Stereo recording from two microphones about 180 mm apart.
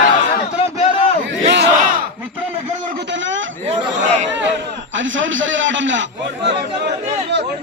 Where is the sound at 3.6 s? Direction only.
40° right (ahead or behind).